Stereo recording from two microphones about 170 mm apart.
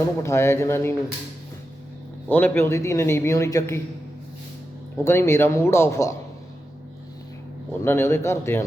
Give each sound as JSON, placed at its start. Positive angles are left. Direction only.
{"t": 0.2, "sound": "a man's voice", "side_deg": 15}
{"t": 2.3, "sound": "a man's voice", "side_deg": 10}
{"t": 5.0, "sound": "a man's voice", "side_deg": 15}
{"t": 7.7, "sound": "a man's voice", "side_deg": 15}